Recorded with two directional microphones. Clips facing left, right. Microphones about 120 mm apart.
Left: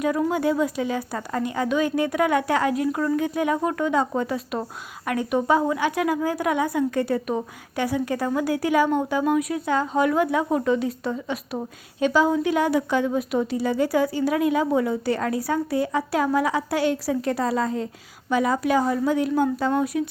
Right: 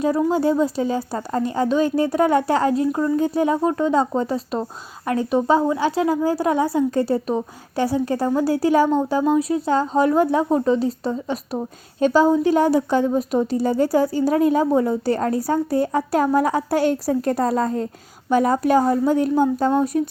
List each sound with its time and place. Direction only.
0.0 s a woman's voice: 30° right (ahead or behind)